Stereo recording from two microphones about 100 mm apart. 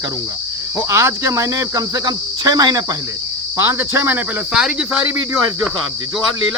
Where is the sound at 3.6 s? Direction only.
25° right (ahead or behind).